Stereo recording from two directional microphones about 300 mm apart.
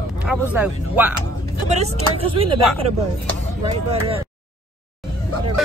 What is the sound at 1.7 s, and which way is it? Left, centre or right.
Speech, right.